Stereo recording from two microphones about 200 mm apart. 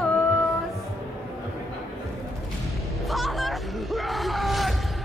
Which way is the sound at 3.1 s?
Centre (ahead or behind).